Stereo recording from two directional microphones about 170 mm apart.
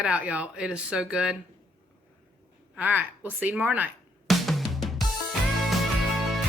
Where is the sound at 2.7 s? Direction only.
10° right (ahead or behind).